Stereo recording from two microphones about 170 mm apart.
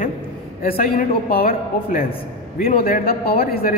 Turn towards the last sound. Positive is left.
turn(degrees=60)  # may be behind; listen again after turning